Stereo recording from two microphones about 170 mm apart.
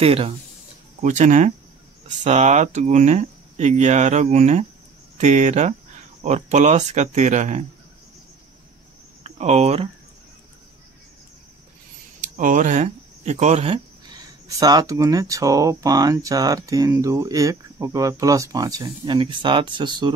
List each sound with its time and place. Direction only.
0.0 s speech: 35° right (ahead or behind)
1.0 s speech: 45° right (ahead or behind)
9.2 s speech: 40° right (ahead or behind)
12.2 s speech: 50° right (ahead or behind)
14.6 s speech: 20° right (ahead or behind)